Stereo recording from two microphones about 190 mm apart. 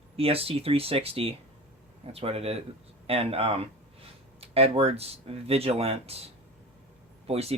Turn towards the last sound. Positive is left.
turn(degrees=-30)  # may be behind; listen again after turning